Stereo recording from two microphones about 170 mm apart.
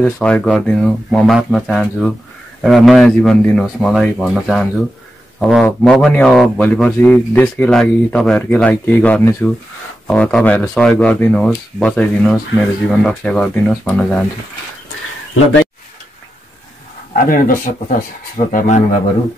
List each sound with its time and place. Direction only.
0.0 s speech: 5° left (ahead or behind)
17.1 s speech: 55° left (ahead or behind)